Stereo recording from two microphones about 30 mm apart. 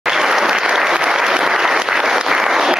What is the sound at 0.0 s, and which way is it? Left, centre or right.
Applause, centre.